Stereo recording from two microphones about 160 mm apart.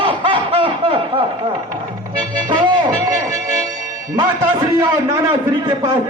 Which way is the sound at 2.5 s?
25° right (ahead or behind).